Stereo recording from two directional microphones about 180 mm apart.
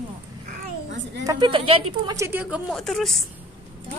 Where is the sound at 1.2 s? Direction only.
25° right (ahead or behind).